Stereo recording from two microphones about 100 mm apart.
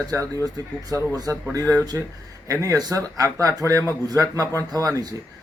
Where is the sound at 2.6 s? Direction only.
35° right (ahead or behind).